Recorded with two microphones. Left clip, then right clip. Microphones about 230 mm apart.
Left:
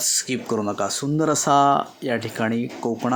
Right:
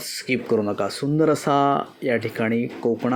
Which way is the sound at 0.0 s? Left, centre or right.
Centre.